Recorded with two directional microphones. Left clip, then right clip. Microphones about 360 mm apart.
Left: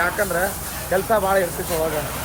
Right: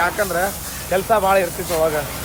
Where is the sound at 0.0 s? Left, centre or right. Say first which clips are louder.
Right 2 dB; centre.